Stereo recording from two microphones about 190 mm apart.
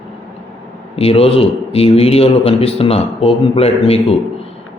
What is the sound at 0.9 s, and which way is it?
A man's voice, 30° left (ahead or behind).